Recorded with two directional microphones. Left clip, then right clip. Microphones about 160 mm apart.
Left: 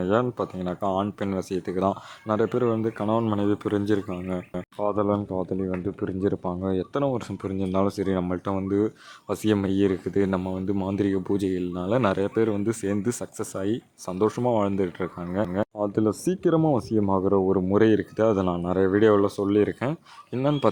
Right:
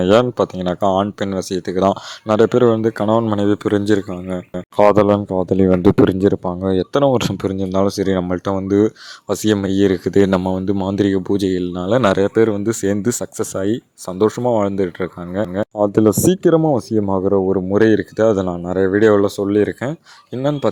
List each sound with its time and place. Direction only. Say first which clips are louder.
0.0 s speech: right 11 dB; 45° right (ahead or behind)
4.8 s speech: right 13 dB; 60° right (ahead or behind)
5.1 s speech: right 10 dB; 40° right (ahead or behind)
5.5 s speech: right 17 dB; 65° right (ahead or behind)
6.1 s speech: right 10 dB; 40° right (ahead or behind)
7.6 s speech: right 7 dB; 30° right (ahead or behind)
15.8 s speech: right 13 dB; 45° right (ahead or behind)
16.6 s speech: right 7 dB; 30° right (ahead or behind)